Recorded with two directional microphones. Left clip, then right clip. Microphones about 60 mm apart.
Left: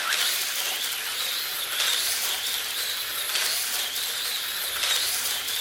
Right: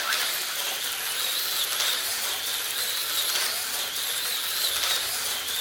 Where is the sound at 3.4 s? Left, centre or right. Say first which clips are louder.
Left 2 dB; centre.